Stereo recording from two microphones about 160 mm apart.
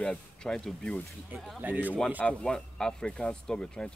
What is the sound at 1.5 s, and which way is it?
Speech, 10° right (ahead or behind).